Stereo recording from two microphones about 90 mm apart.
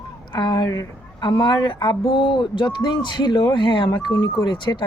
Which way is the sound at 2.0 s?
65° left (ahead or behind).